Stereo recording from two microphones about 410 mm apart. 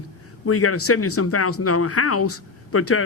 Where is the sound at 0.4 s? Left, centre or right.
Left.